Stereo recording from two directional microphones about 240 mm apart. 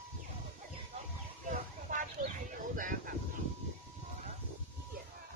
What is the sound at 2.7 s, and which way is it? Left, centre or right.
Speech, right.